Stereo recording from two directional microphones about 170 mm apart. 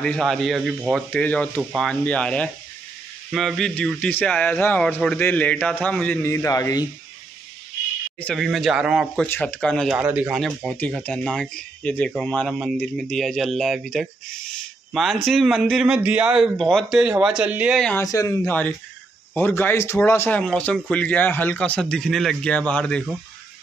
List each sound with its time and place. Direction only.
0.0 s speech: 5° left (ahead or behind)
1.1 s speech: 10° left (ahead or behind)
8.2 s speech: 5° left (ahead or behind)
9.2 s speech: 10° left (ahead or behind)
9.8 s speech: 5° right (ahead or behind)
17.7 s speech: 5° left (ahead or behind)
18.0 s speech: 20° left (ahead or behind)
18.5 s speech: 10° left (ahead or behind)